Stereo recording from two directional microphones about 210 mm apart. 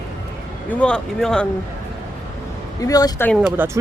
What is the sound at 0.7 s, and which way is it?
Speech, 5° left (ahead or behind).